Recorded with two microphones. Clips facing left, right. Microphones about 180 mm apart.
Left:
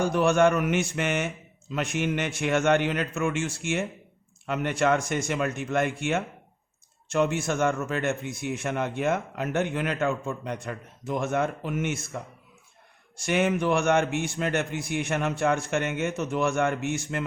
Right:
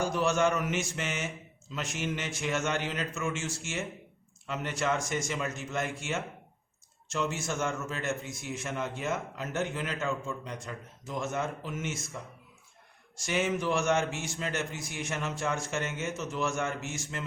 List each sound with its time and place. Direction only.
0.0 s a man's voice: 60° left (ahead or behind)